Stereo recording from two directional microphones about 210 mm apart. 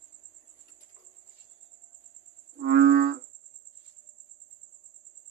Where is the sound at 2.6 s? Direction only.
50° right (ahead or behind).